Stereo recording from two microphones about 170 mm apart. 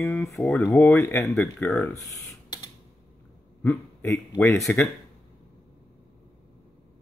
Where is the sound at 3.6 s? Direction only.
5° left (ahead or behind).